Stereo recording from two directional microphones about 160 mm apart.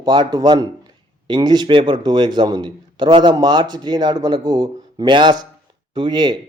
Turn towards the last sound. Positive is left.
turn(degrees=-30)  # may be behind; listen again after turning